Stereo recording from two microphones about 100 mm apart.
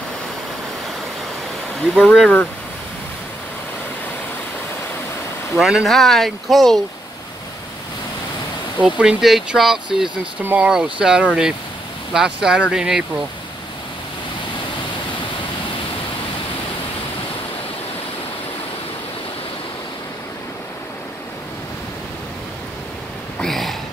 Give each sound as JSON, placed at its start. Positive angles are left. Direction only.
{"t": 1.8, "sound": "speech", "side_deg": 5}
{"t": 5.6, "sound": "speech", "side_deg": -5}
{"t": 8.7, "sound": "speech", "side_deg": -10}
{"t": 10.4, "sound": "speech", "side_deg": -15}
{"t": 23.4, "sound": "a sound", "side_deg": 5}